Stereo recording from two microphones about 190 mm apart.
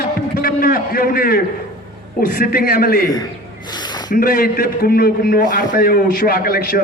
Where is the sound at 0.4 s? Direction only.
50° left (ahead or behind).